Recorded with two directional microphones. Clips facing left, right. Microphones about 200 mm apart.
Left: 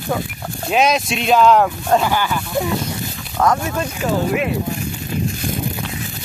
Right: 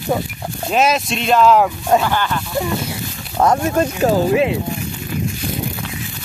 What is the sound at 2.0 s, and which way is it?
Speech, 10° left (ahead or behind).